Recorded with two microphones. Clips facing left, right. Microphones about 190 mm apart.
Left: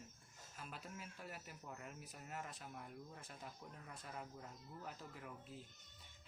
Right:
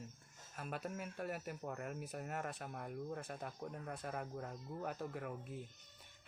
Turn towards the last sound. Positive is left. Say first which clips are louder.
# right 8 dB
turn(degrees=-55)  # may be behind; listen again after turning